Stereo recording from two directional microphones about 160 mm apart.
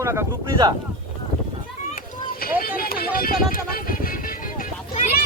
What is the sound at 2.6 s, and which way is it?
Music, 65° left (ahead or behind).